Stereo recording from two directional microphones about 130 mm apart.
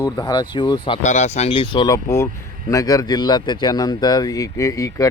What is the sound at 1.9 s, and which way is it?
Speech, 20° left (ahead or behind).